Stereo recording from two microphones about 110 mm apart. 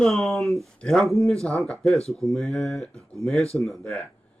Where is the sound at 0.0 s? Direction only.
Centre (ahead or behind).